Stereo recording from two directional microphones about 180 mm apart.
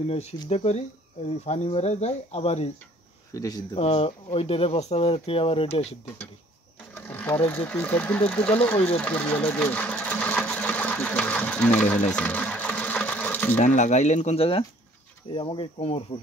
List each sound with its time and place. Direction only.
0.5 s speech: 35° left (ahead or behind)
3.3 s speech: 20° left (ahead or behind)
3.8 s speech: 35° left (ahead or behind)
6.9 s speech: 10° left (ahead or behind)
8.9 s sewing machine: 10° left (ahead or behind)
13.6 s speech: 40° left (ahead or behind)